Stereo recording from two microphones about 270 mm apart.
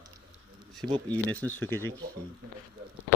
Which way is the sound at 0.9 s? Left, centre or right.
Centre.